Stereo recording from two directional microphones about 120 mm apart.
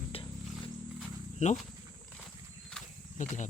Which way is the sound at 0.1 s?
45° left (ahead or behind).